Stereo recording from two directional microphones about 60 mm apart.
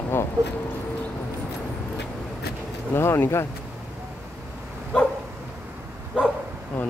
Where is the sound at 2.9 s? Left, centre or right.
Left.